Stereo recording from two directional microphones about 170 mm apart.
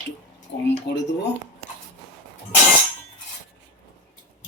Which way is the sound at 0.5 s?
90° left.